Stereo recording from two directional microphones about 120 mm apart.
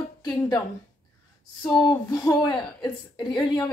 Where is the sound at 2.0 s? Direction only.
35° left (ahead or behind).